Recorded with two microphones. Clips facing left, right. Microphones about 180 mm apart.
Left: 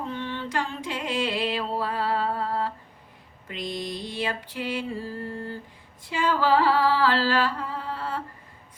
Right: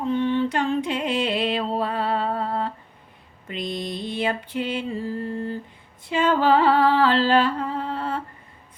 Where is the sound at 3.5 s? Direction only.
20° right (ahead or behind).